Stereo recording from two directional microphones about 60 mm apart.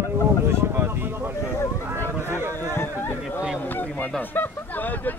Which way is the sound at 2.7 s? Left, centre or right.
Left.